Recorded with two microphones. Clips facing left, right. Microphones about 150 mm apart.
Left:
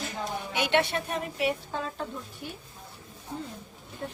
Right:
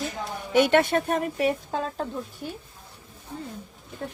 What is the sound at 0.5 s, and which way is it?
A woman's voice, 45° right (ahead or behind).